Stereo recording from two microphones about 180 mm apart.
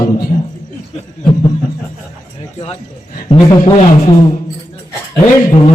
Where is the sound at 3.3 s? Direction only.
30° left (ahead or behind).